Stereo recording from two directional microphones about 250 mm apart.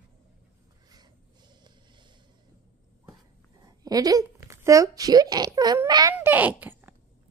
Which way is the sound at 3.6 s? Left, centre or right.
Centre.